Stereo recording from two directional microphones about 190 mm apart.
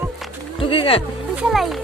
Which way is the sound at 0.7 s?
30° left (ahead or behind).